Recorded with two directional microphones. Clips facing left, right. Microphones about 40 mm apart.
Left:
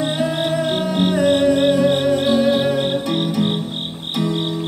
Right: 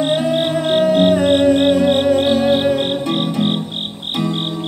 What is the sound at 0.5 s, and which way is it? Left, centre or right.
Music, right.